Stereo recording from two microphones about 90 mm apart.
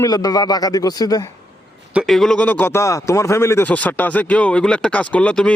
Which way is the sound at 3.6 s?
15° left (ahead or behind).